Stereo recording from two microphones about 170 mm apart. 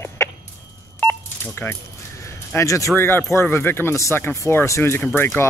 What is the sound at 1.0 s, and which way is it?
Telephone dialing, 10° left (ahead or behind).